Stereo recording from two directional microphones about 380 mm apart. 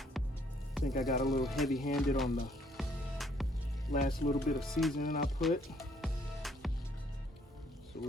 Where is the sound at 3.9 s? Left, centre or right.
Left.